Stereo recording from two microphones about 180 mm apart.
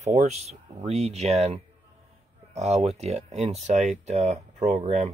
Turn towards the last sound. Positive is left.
turn(degrees=-40)  # may be behind; listen again after turning